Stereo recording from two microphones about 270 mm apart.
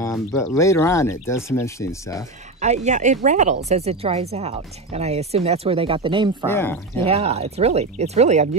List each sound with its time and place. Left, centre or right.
0.1 s speech: centre
2.6 s a woman's voice: right
6.5 s speech: centre
7.1 s a woman's voice: right